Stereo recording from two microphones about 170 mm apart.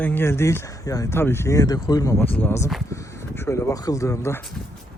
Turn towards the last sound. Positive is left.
turn(degrees=15)  # may be behind; listen again after turning